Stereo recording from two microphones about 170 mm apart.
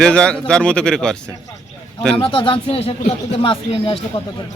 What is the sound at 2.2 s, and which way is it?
Speech, 30° left (ahead or behind).